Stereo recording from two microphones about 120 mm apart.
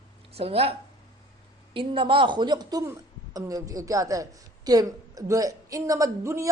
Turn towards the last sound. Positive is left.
turn(degrees=-25)  # may be behind; listen again after turning